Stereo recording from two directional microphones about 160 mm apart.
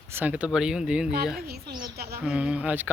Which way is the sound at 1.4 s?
75° right (ahead or behind).